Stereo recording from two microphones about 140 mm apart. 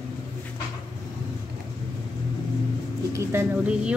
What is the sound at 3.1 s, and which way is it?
Bird, 20° right (ahead or behind).